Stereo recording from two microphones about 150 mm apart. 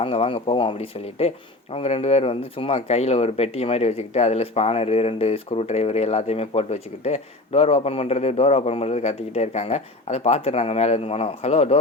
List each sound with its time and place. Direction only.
0.0 s speech: 40° left (ahead or behind)